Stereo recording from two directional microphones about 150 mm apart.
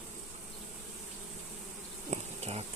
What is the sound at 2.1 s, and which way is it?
Bee, 45° right (ahead or behind).